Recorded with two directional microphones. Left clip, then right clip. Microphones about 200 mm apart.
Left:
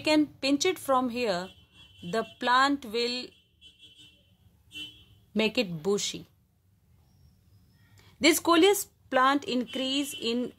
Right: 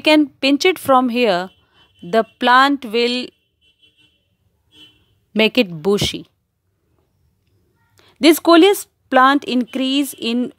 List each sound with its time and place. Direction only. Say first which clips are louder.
0.0 s speech: right 12 dB; 45° right (ahead or behind)
5.3 s speech: right 12 dB; 45° right (ahead or behind)
7.9 s speech: right 11 dB; 50° right (ahead or behind)